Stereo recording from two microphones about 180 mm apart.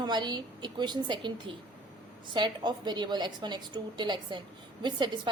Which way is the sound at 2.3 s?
25° right (ahead or behind).